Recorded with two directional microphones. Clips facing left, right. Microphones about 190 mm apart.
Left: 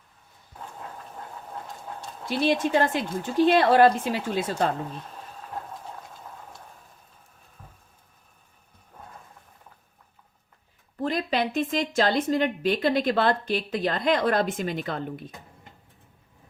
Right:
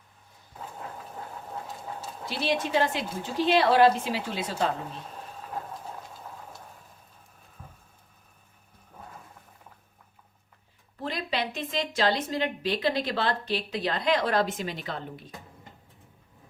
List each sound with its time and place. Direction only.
0.6 s vehicle: 5° right (ahead or behind)
1.6 s train: 5° right (ahead or behind)
2.3 s a woman's voice: 50° left (ahead or behind)
5.5 s a sound: centre (ahead or behind)
11.0 s a woman's voice: 45° left (ahead or behind)